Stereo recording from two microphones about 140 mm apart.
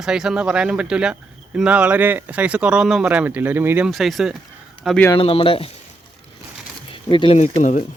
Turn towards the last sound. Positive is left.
turn(degrees=60)  # may be behind; listen again after turning